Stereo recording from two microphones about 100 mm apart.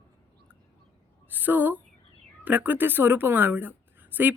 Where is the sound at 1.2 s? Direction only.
20° right (ahead or behind).